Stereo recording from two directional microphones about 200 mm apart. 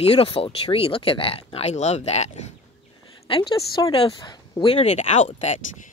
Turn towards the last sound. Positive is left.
turn(degrees=35)  # may be behind; listen again after turning